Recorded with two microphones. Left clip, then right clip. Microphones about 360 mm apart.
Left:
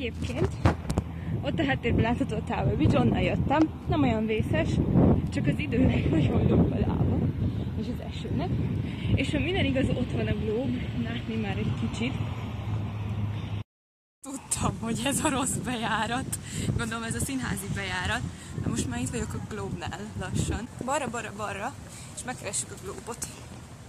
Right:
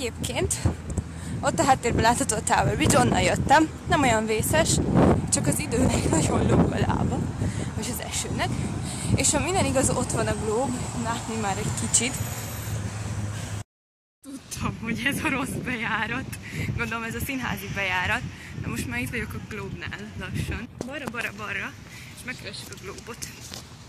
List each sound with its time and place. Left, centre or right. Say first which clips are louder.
0.6 s speech: left 5 dB; left
1.4 s speech: right 7 dB; right
7.8 s vehicle: right 8 dB; right
9.0 s speech: right 4 dB; right
14.6 s speech: right 3 dB; centre